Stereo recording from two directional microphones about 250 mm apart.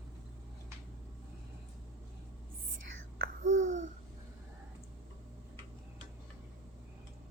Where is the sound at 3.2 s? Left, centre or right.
Right.